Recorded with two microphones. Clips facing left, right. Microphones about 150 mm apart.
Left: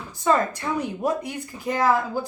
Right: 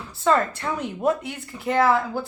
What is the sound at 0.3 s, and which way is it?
A woman's voice, 15° left (ahead or behind).